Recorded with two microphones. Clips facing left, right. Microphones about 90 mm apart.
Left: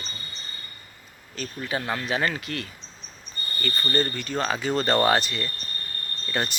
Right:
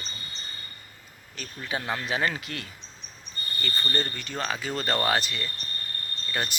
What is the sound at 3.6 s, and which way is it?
Speech, centre (ahead or behind).